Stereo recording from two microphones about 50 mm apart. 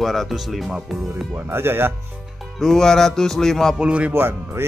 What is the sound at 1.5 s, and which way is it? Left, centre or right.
Speech, right.